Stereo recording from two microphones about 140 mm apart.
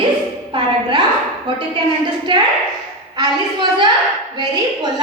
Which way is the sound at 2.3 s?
35° right (ahead or behind).